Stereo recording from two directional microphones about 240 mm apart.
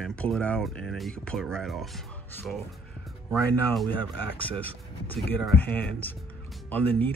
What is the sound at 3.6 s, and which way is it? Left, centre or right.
Speech, centre.